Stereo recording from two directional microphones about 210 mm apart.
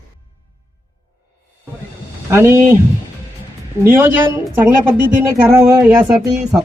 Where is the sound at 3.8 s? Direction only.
10° right (ahead or behind).